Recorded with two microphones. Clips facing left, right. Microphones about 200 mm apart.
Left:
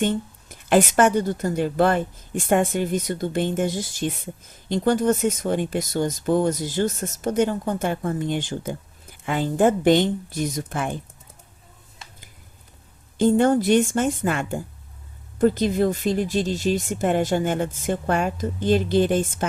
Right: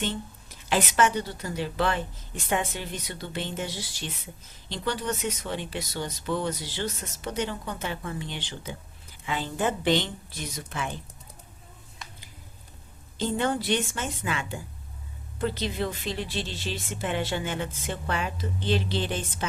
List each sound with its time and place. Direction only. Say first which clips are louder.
0.0 s speech: left 8 dB; 50° left (ahead or behind)
13.1 s speech: left 10 dB; 50° left (ahead or behind)